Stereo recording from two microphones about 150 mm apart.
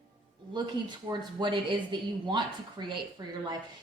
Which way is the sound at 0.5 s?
30° right (ahead or behind).